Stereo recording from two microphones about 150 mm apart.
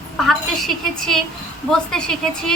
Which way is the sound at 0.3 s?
Centre (ahead or behind).